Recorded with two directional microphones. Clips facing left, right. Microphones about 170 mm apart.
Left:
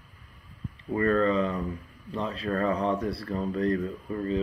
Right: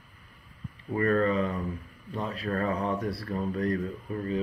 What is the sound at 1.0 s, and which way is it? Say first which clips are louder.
Speech: left 1 dB; 30° left (ahead or behind).